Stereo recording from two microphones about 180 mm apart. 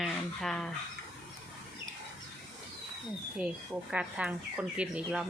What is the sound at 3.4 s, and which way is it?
Speech, 5° right (ahead or behind).